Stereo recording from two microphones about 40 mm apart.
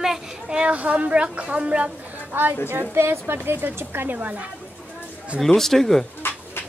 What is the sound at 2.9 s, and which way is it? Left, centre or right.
Speech, right.